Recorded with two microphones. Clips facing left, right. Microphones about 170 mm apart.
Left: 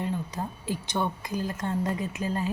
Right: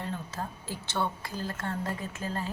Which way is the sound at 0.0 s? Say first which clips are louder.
Left 5 dB; 15° left (ahead or behind).